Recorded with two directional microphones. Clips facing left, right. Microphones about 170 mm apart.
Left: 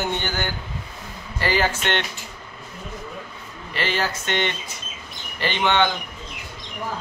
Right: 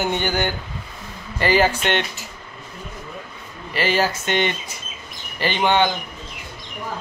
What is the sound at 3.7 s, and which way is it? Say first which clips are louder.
Speech: right 5 dB; 10° right (ahead or behind).